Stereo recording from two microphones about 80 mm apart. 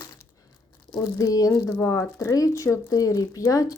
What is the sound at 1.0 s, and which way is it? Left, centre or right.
Speech, left.